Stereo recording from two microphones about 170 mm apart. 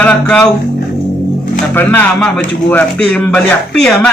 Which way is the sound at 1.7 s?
10° left (ahead or behind).